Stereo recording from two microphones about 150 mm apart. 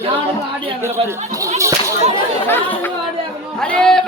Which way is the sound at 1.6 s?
20° right (ahead or behind).